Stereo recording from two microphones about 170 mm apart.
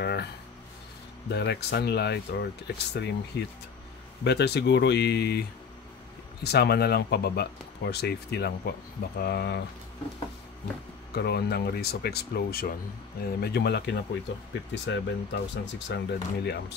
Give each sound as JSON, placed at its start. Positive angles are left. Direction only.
{"t": 0.0, "sound": "a sound", "side_deg": 75}
{"t": 1.3, "sound": "speech", "side_deg": 75}
{"t": 6.4, "sound": "speech", "side_deg": 70}
{"t": 11.1, "sound": "speech", "side_deg": 70}
{"t": 14.5, "sound": "speech", "side_deg": 90}